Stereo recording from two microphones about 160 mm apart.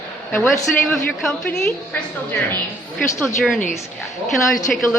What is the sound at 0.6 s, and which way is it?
A woman's voice, centre (ahead or behind).